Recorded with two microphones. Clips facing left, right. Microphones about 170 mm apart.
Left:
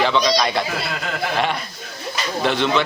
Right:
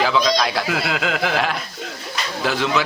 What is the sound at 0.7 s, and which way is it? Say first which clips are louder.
Speech: right 4 dB; 90° right.